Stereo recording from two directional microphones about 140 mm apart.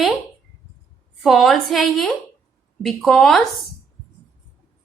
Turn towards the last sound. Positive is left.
turn(degrees=0)  # may be behind; listen again after turning